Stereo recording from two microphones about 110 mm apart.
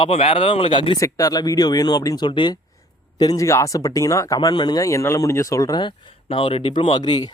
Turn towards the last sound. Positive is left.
turn(degrees=40)  # may be behind; listen again after turning